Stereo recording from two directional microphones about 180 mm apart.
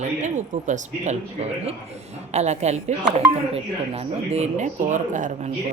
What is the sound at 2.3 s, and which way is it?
Speech, 40° right (ahead or behind).